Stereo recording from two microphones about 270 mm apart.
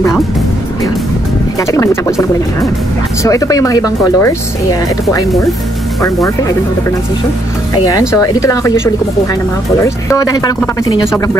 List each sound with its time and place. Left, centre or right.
1.6 s speech: centre
8.1 s speech: centre